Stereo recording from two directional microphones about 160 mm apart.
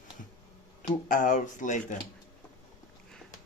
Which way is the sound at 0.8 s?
55° left (ahead or behind).